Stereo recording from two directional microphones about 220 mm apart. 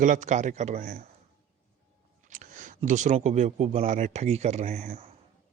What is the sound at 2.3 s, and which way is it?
A man's voice, 35° right (ahead or behind).